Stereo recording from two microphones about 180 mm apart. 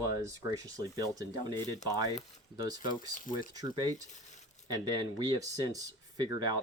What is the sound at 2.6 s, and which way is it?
Speech, 20° right (ahead or behind).